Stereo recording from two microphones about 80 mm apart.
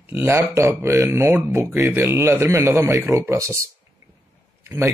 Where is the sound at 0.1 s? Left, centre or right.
Right.